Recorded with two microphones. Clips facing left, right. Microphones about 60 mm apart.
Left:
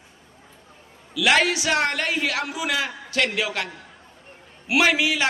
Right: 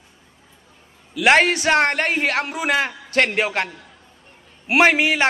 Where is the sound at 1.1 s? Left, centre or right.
Right.